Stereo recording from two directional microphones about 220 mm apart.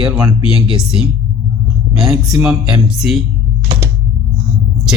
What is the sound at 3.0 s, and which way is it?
Speech, centre (ahead or behind).